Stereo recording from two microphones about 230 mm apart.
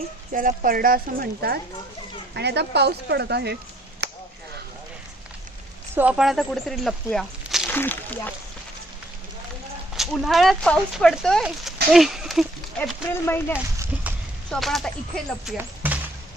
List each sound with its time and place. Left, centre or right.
0.3 s speech: right
4.0 s a sound: right
5.9 s speech: centre
9.9 s speech: centre
13.5 s a sound: centre
14.5 s speech: centre
15.4 s basketball bounce: centre